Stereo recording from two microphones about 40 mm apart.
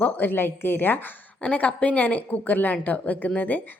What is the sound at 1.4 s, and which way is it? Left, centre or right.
A woman's voice, left.